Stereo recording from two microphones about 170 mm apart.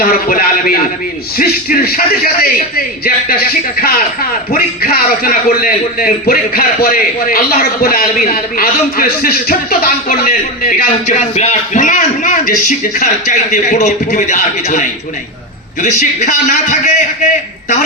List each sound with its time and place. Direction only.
0.0 s a man's voice: 60° left (ahead or behind); by 16.9 s 45° left (ahead or behind)